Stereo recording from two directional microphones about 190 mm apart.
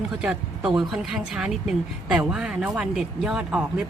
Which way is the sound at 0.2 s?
5° right (ahead or behind).